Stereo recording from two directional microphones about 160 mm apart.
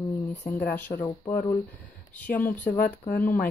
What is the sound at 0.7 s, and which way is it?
Speech, 10° left (ahead or behind).